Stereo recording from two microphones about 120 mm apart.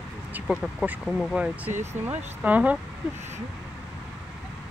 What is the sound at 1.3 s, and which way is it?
Speech, 10° right (ahead or behind).